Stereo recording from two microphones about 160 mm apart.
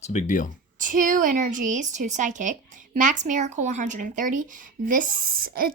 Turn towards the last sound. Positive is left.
turn(degrees=-65)  # may be behind; listen again after turning